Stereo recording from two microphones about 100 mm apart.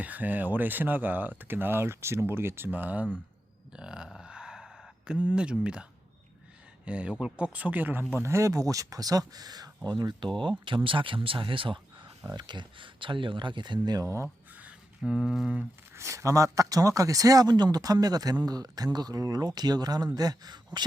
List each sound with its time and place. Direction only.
0.0 s speech: 15° right (ahead or behind)
3.7 s a sound: 10° right (ahead or behind)
6.8 s speech: 10° right (ahead or behind); by 10.2 s 40° right (ahead or behind)
10.8 s speech: 60° right (ahead or behind)
12.2 s speech: 40° right (ahead or behind)
15.0 s a sound: 5° right (ahead or behind)
16.0 s speech: 30° right (ahead or behind)